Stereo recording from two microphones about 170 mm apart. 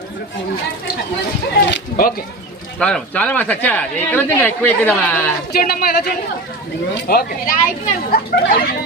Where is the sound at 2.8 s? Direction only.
5° left (ahead or behind).